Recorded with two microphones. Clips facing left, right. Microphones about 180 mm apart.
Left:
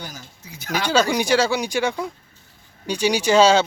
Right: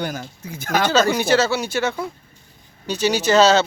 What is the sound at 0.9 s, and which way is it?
Speech, 15° left (ahead or behind).